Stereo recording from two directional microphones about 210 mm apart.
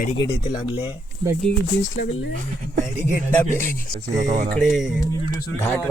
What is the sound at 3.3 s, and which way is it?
Speech, 10° left (ahead or behind).